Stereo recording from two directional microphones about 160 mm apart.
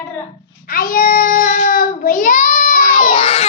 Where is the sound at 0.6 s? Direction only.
65° left (ahead or behind).